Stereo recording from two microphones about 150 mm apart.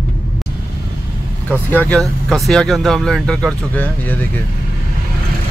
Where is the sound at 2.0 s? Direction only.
Centre (ahead or behind).